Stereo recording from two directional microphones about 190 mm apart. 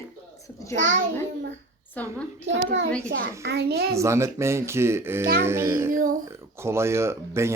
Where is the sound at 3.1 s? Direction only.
65° right (ahead or behind).